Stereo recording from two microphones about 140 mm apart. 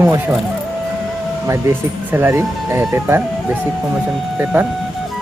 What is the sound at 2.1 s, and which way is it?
Speech, 15° right (ahead or behind).